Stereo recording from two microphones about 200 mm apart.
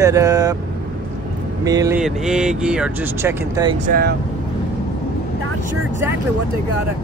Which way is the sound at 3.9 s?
50° right (ahead or behind).